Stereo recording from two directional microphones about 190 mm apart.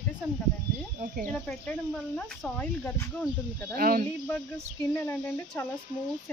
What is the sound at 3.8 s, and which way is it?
Speech, 50° right (ahead or behind).